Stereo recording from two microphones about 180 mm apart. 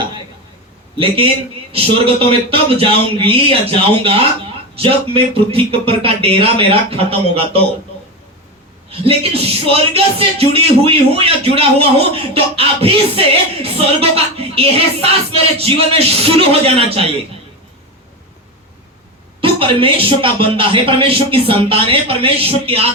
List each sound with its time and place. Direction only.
1.7 s a man's voice: 30° right (ahead or behind)
8.9 s a man's voice: 35° right (ahead or behind)
19.4 s a man's voice: 30° right (ahead or behind)